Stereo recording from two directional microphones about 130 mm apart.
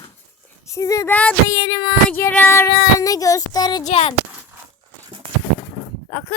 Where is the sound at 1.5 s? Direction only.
25° left (ahead or behind).